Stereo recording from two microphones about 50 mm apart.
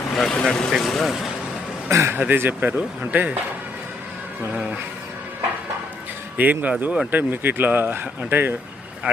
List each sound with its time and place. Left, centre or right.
0.3 s speech: centre
1.9 s speech: right
2.1 s speech: right
4.5 s speech: right
6.3 s speech: right